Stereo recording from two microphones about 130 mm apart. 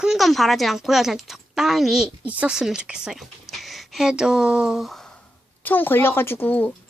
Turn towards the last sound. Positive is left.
turn(degrees=15)  # may be behind; listen again after turning